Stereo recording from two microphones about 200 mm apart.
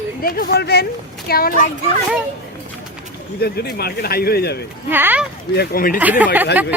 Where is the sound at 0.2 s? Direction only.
45° left (ahead or behind).